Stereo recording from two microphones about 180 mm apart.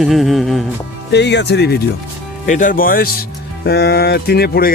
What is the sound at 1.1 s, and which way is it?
Speech, 70° left (ahead or behind).